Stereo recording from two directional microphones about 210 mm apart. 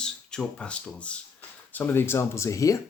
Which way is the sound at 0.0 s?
5° left (ahead or behind).